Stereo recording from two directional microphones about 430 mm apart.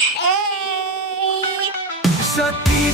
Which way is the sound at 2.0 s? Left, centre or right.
Centre.